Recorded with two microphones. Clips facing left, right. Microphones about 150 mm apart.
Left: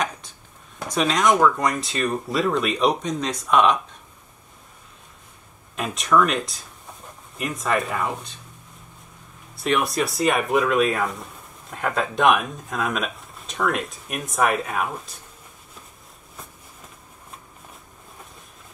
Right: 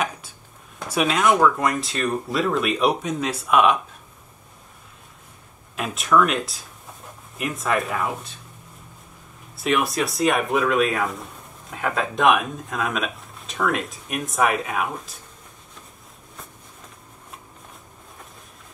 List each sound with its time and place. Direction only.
0.7 s speech: 5° right (ahead or behind)
5.8 s speech: centre (ahead or behind)
9.6 s speech: centre (ahead or behind)